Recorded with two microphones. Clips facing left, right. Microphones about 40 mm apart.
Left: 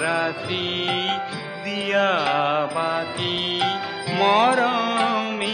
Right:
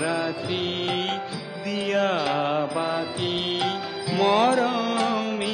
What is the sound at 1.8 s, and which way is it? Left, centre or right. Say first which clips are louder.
Mantra: left 3 dB; centre.